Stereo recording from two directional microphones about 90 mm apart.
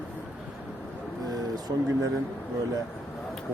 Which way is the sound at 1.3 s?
45° right (ahead or behind).